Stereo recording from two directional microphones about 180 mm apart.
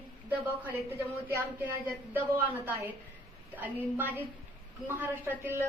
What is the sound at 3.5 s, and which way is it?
Speech, 10° right (ahead or behind).